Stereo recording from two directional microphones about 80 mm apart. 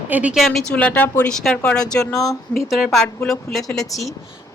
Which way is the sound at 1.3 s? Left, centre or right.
Centre.